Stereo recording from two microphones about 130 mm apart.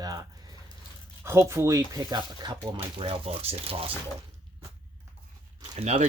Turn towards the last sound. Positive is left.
turn(degrees=-55)  # may be behind; listen again after turning